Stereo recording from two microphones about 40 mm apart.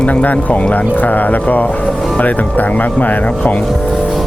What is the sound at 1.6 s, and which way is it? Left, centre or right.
Speech, left.